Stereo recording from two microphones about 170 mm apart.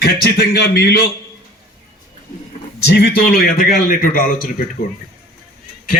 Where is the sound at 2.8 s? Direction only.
75° left (ahead or behind); by 4.4 s 55° left (ahead or behind).